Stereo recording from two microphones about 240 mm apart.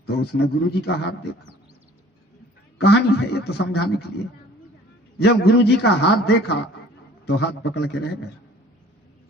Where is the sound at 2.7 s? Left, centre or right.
Left.